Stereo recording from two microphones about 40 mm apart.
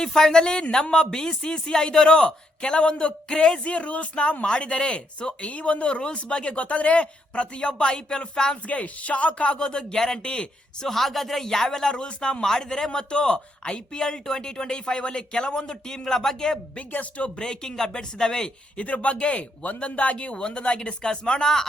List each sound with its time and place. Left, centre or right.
0.0 s speech: centre
8.6 s speech: left
10.8 s speech: centre
16.9 s speech: left; by 18.5 s centre
18.8 s speech: left
20.3 s speech: left